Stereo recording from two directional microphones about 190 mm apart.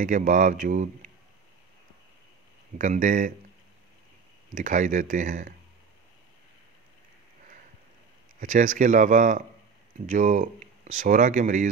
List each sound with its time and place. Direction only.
0.0 s speech: 40° right (ahead or behind)
2.8 s speech: 40° right (ahead or behind)
4.6 s speech: 40° right (ahead or behind)
8.4 s speech: 45° right (ahead or behind)